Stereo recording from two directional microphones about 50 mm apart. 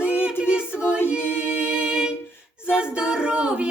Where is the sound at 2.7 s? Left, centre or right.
Centre.